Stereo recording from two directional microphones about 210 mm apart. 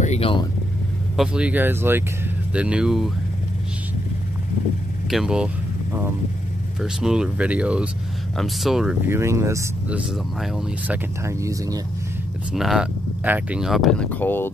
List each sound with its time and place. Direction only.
0.0 s speech: 30° left (ahead or behind)
1.1 s speech: 5° right (ahead or behind)
5.1 s speech: 5° right (ahead or behind)
6.8 s speech: 5° right (ahead or behind)
11.2 s speech: 15° right (ahead or behind)
12.5 s speech: centre (ahead or behind)